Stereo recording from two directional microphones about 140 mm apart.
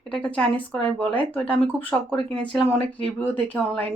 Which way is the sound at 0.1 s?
5° left (ahead or behind).